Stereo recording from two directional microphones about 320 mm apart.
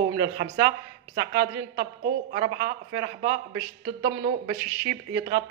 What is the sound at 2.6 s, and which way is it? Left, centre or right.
Speech, right.